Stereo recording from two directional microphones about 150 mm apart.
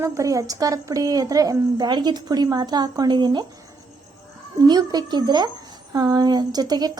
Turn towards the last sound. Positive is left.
turn(degrees=-25)  # may be behind; listen again after turning